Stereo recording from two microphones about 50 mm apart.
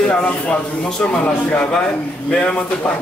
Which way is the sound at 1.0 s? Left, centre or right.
Left.